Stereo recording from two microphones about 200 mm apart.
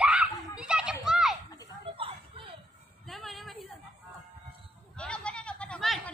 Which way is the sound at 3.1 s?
Centre (ahead or behind).